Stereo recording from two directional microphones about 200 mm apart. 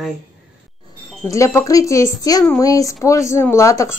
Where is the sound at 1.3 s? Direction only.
15° left (ahead or behind).